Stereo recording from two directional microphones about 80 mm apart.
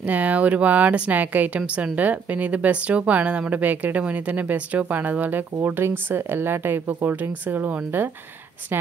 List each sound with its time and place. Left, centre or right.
0.0 s speech: centre